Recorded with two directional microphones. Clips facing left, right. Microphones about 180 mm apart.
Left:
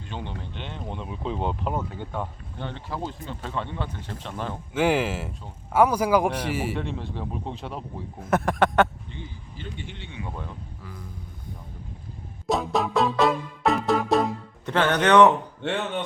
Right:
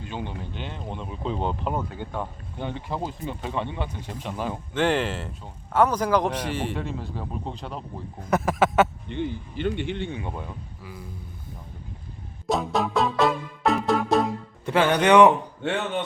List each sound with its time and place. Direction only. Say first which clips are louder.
0.0 s a man's voice: right 2 dB; 5° right (ahead or behind)
2.6 s speech: right 2 dB; 15° right (ahead or behind)
4.7 s a man's voice: left 1 dB; 5° left (ahead or behind)
9.0 s speech: right 11 dB; 65° right (ahead or behind)
10.3 s speech: right 1 dB; 10° right (ahead or behind)
12.5 s music: even; centre (ahead or behind)